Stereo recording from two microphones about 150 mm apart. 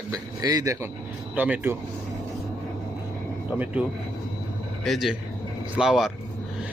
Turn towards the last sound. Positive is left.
turn(degrees=-5)  # may be behind; listen again after turning